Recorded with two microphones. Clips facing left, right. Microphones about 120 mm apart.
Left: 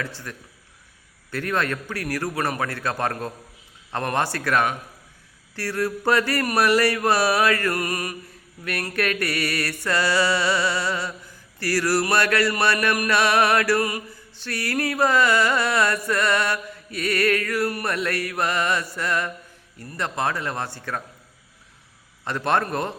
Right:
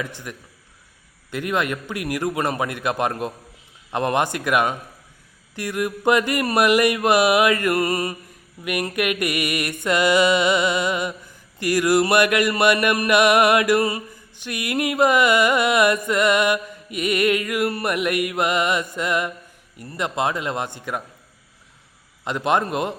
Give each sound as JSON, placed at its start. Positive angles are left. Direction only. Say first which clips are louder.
{"t": 0.0, "sound": "music", "louder": "right 2 dB", "side_deg": -15}
{"t": 8.6, "sound": "music", "louder": "right 3 dB", "side_deg": -15}
{"t": 22.2, "sound": "music", "louder": "right 2 dB", "side_deg": -15}